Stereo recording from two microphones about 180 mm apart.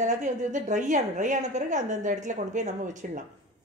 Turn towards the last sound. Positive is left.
turn(degrees=-45)  # may be behind; listen again after turning